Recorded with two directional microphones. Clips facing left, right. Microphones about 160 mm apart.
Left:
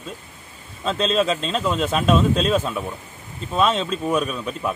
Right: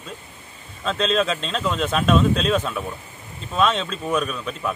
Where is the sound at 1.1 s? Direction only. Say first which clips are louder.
Left 2 dB; centre (ahead or behind).